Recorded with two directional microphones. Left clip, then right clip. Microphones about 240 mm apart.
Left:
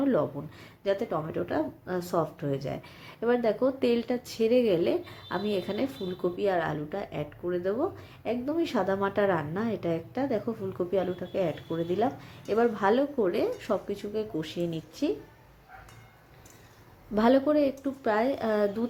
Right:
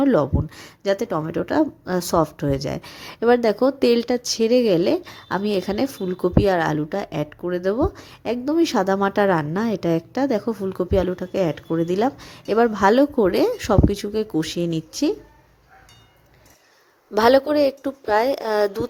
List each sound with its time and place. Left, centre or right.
0.0 s speech: right
17.2 s speech: right